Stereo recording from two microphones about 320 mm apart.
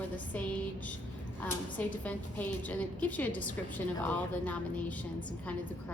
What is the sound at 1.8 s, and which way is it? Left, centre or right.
A woman's voice, centre.